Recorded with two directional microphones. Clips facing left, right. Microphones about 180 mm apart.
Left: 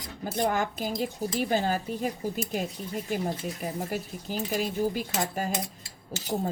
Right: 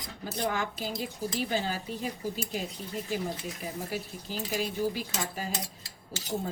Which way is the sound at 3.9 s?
45° left (ahead or behind).